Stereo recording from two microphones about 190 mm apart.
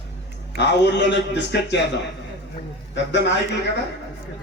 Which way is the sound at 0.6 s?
65° left (ahead or behind).